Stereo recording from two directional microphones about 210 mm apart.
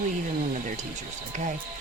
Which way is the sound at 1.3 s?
35° right (ahead or behind).